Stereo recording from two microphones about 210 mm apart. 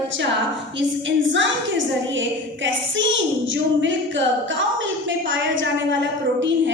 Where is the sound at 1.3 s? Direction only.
60° right (ahead or behind).